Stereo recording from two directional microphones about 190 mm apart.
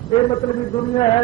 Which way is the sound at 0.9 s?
25° left (ahead or behind).